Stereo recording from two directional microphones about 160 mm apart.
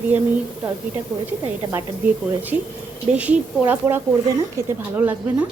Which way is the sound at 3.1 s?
10° right (ahead or behind).